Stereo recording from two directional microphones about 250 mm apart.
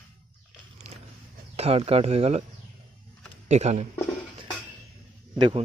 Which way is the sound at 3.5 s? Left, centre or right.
Right.